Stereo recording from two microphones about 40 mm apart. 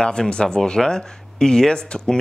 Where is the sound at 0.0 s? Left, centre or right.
Left.